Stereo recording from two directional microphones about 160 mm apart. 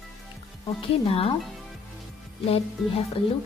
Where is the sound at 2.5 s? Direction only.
40° left (ahead or behind).